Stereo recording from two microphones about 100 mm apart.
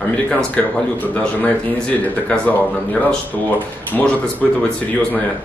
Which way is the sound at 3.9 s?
15° left (ahead or behind).